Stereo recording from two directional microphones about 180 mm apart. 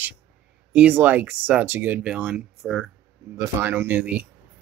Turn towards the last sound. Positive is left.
turn(degrees=-10)  # may be behind; listen again after turning